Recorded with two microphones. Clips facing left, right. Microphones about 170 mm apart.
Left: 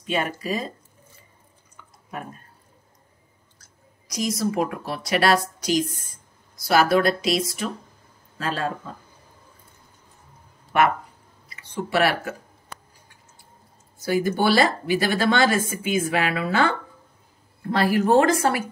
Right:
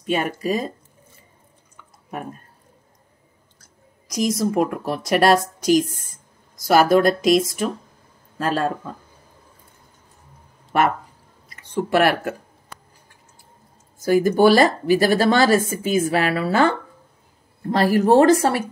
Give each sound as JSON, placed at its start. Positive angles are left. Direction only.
{"t": 0.0, "sound": "speech", "side_deg": -45}
{"t": 4.4, "sound": "speech", "side_deg": -50}
{"t": 11.4, "sound": "speech", "side_deg": -45}
{"t": 14.0, "sound": "speech", "side_deg": -45}